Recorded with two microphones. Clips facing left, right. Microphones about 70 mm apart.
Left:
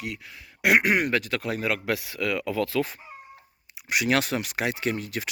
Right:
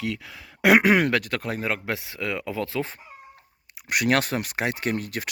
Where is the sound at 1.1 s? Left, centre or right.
Right.